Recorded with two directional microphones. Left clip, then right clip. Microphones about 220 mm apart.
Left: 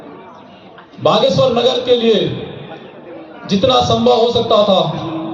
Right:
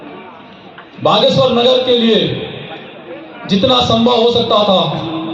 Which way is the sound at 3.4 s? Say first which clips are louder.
Right 1 dB; 45° right (ahead or behind).